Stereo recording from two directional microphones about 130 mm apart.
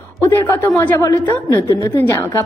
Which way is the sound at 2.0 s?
20° left (ahead or behind).